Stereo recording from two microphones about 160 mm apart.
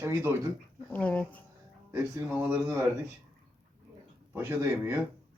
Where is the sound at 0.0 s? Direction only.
15° right (ahead or behind).